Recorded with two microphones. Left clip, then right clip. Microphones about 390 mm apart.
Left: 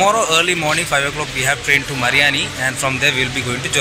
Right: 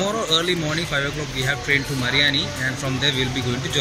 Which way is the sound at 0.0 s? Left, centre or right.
Left.